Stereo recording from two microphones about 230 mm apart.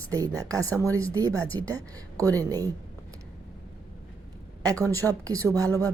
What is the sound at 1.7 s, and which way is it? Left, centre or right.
A woman's voice, centre.